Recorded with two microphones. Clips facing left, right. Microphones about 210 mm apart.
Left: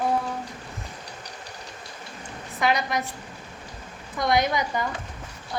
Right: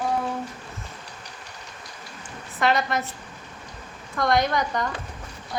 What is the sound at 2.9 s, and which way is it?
Speech, 15° left (ahead or behind).